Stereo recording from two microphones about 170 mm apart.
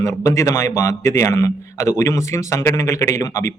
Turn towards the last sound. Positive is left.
turn(degrees=20)  # may be behind; listen again after turning